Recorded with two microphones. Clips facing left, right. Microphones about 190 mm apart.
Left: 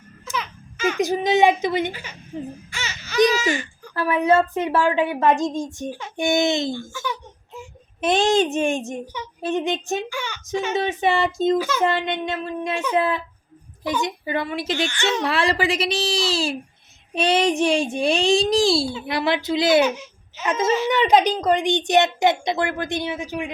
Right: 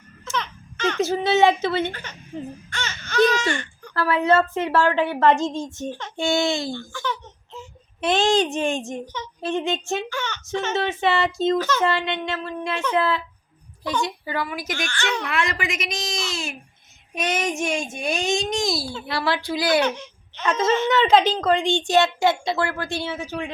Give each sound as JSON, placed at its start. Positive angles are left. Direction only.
{"t": 0.3, "sound": "a sound", "side_deg": 10}
{"t": 2.6, "sound": "speech", "side_deg": 5}
{"t": 6.7, "sound": "a sound", "side_deg": 10}
{"t": 8.0, "sound": "a woman's voice", "side_deg": 20}
{"t": 15.3, "sound": "a child's voice", "side_deg": 30}
{"t": 19.8, "sound": "speech", "side_deg": 5}